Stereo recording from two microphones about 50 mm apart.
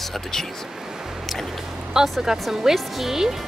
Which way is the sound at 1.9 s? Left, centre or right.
Centre.